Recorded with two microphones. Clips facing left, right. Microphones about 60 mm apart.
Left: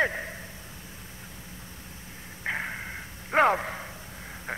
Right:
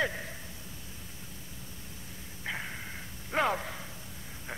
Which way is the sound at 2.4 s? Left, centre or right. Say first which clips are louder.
Left 6 dB; left.